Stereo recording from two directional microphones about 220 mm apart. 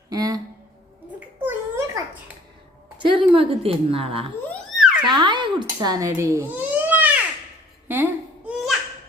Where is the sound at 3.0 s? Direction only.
20° right (ahead or behind).